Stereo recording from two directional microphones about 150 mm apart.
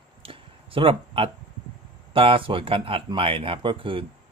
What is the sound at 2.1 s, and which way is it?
Speech, 35° right (ahead or behind).